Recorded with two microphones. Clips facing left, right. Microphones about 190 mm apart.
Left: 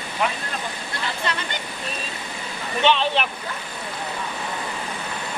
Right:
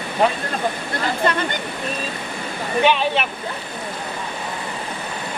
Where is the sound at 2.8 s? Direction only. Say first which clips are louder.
Right 2 dB; 5° right (ahead or behind).